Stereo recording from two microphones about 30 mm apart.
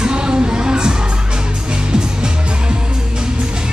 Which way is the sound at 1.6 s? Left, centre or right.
Right.